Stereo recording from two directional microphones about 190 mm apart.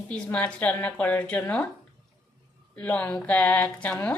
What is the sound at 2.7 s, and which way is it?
A woman's voice, 5° left (ahead or behind).